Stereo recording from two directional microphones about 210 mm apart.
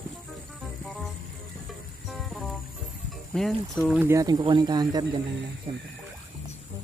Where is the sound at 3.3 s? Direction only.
Centre (ahead or behind); by 5.0 s 20° right (ahead or behind).